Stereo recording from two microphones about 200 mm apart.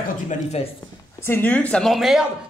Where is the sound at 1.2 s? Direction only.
10° left (ahead or behind).